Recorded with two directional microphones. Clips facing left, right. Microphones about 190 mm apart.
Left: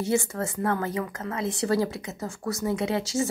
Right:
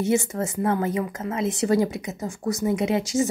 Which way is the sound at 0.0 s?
20° right (ahead or behind).